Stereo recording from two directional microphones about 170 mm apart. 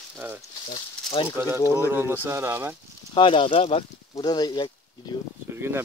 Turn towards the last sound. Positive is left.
turn(degrees=-15)  # may be behind; listen again after turning